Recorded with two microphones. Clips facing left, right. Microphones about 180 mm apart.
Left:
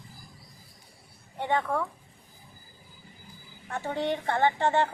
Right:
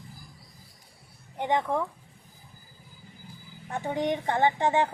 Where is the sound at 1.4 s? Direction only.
15° right (ahead or behind).